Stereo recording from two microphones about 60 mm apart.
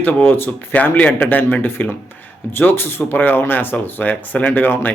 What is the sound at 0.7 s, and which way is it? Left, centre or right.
Speech, left.